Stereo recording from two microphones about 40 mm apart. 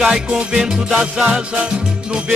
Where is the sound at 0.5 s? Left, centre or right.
Centre.